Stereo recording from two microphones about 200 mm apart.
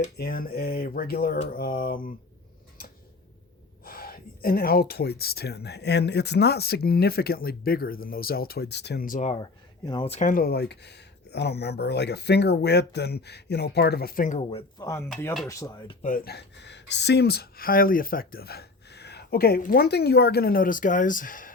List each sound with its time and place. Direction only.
0.2 s speech: 50° left (ahead or behind)
3.8 s speech: 50° left (ahead or behind)
9.3 s speech: 20° left (ahead or behind)
10.2 s speech: 45° left (ahead or behind)
14.8 s speech: 15° left (ahead or behind)
16.0 s speech: 45° left (ahead or behind)